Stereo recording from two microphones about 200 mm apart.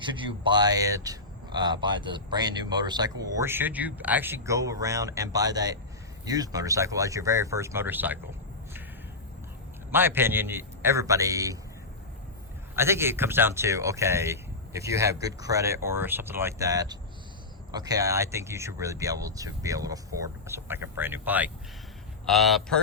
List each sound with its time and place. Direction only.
0.0 s speech: 25° right (ahead or behind)
9.9 s speech: 10° right (ahead or behind)
12.7 s speech: 10° right (ahead or behind)